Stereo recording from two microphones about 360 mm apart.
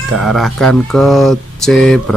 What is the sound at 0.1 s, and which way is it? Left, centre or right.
Speech, centre.